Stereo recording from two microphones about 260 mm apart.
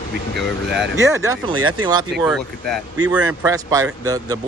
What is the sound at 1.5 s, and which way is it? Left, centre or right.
Speech, right.